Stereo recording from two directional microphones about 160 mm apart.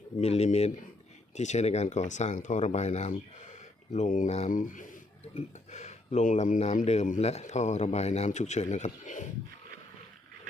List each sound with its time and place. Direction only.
0.2 s speech: 40° left (ahead or behind)
5.3 s speech: 45° left (ahead or behind)